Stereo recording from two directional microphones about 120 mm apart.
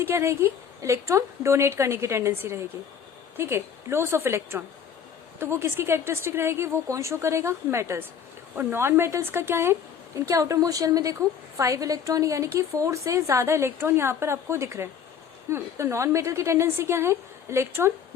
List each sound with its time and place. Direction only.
0.0 s a woman's voice: 20° right (ahead or behind)